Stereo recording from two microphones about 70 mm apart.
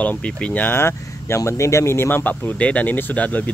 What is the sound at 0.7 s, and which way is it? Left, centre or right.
Speech, left.